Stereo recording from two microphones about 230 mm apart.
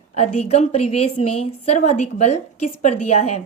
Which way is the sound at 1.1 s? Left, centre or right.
Left.